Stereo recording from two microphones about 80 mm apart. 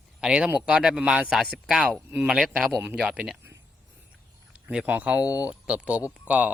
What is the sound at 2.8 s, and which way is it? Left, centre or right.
Speech, centre.